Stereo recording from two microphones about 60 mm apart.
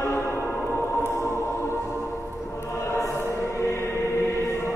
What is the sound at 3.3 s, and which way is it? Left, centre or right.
Choir, left.